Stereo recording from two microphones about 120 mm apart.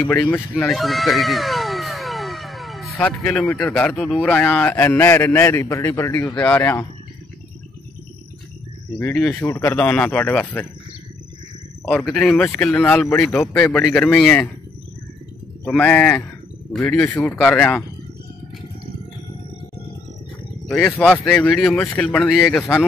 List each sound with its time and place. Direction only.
0.1 s a sound: 10° left (ahead or behind)
3.5 s a man's voice: 10° left (ahead or behind)
9.3 s a man's voice: 15° left (ahead or behind)
11.8 s a man's voice: 5° left (ahead or behind)
13.0 s a man's voice: 20° left (ahead or behind)
15.6 s a man's voice: 10° left (ahead or behind)
20.6 s a man's voice: 5° left (ahead or behind)